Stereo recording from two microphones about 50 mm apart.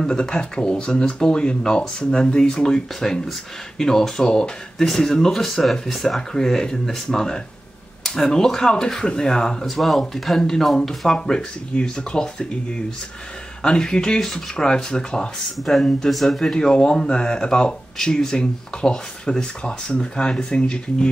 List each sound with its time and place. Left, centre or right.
0.0 s speech: centre
9.8 s speech: centre